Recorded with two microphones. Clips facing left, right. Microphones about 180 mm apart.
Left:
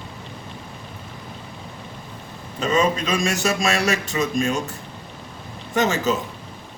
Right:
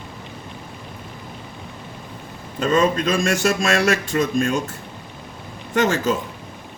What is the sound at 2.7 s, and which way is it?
A woman's voice, 50° right (ahead or behind).